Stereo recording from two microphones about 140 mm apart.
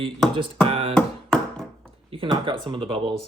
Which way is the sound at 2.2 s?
35° right (ahead or behind).